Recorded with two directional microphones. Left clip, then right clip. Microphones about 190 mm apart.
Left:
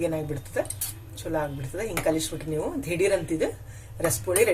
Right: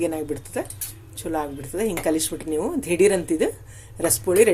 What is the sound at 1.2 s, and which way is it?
A woman's voice, 40° right (ahead or behind).